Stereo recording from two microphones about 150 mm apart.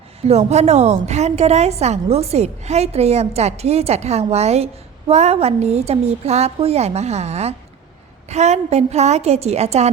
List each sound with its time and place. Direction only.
0.2 s a woman's voice: 45° right (ahead or behind)